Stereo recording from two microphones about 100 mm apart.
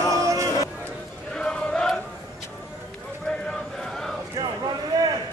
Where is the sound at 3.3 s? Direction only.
5° left (ahead or behind).